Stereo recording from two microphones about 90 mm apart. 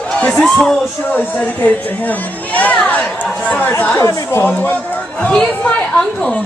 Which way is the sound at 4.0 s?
30° left (ahead or behind).